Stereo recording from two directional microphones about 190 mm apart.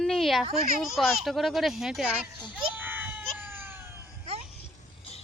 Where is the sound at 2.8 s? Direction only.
10° right (ahead or behind).